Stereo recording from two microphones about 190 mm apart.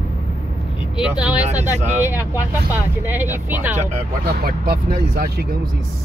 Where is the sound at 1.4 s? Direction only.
40° right (ahead or behind).